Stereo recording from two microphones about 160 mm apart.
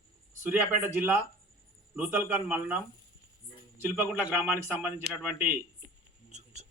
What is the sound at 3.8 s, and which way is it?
A man's voice, 10° right (ahead or behind).